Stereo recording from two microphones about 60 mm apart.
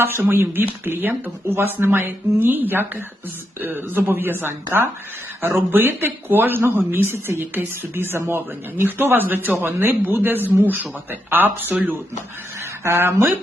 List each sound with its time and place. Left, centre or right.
0.0 s speech: right
12.8 s speech: right